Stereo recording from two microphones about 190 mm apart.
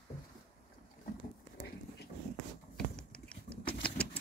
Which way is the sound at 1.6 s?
60° left (ahead or behind).